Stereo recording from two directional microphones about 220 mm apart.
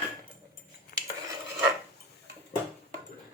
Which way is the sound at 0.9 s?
40° left (ahead or behind).